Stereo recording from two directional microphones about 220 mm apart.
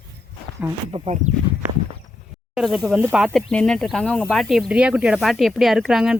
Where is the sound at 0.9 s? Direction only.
25° right (ahead or behind).